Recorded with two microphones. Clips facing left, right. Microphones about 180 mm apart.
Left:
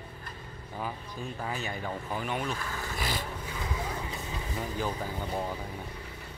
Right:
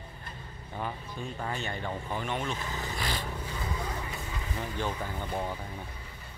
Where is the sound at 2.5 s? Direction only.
20° right (ahead or behind).